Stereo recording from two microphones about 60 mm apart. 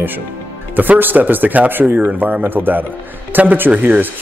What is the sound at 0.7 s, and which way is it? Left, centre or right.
Speech, right.